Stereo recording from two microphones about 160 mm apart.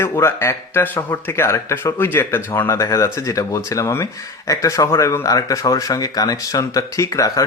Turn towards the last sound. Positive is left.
turn(degrees=20)  # may be behind; listen again after turning